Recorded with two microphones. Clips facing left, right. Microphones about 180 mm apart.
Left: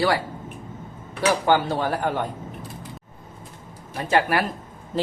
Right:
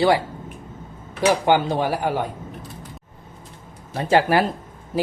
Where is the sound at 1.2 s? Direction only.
15° right (ahead or behind).